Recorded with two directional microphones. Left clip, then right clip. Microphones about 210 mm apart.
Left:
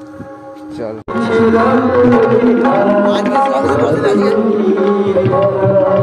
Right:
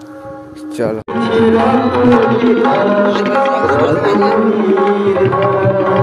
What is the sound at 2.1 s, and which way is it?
Music, 55° right (ahead or behind).